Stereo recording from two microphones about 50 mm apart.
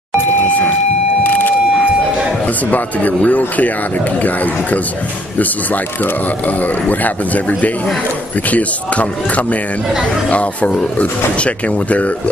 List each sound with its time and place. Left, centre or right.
1.2 s vehicle: left
2.4 s speech: left